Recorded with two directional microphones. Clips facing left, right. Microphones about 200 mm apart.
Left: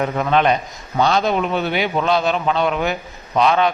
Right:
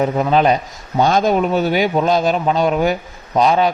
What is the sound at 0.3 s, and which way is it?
A man's voice, 35° right (ahead or behind).